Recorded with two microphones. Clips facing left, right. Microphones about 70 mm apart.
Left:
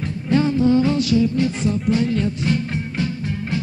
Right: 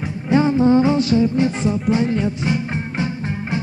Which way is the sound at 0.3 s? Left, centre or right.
Right.